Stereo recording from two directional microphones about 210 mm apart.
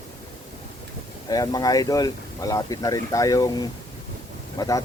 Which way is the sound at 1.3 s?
15° left (ahead or behind).